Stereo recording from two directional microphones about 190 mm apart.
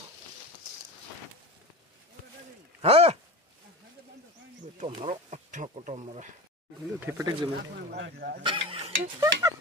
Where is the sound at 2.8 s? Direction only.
30° right (ahead or behind).